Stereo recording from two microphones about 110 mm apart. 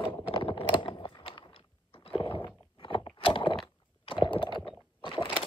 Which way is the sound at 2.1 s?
55° left (ahead or behind).